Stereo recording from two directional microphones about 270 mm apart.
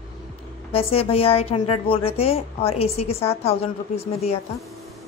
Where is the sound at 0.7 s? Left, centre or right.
Left.